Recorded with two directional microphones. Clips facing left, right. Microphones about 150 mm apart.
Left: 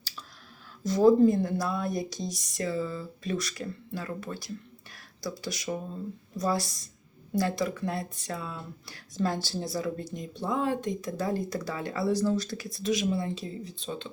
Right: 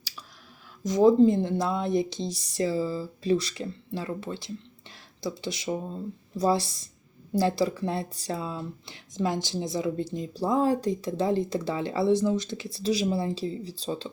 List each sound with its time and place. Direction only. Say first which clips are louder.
0.9 s speech: right 1 dB; 20° right (ahead or behind); by 14.1 s 35° right (ahead or behind)